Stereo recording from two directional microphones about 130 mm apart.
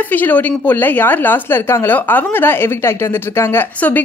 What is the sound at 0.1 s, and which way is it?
A woman's voice, 15° left (ahead or behind).